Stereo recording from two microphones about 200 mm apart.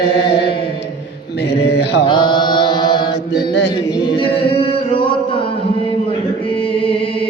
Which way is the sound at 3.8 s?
20° left (ahead or behind).